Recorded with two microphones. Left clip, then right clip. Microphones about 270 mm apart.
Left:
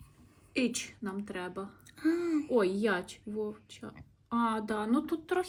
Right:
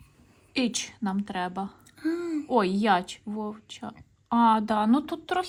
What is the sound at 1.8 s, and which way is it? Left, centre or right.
Speech, centre.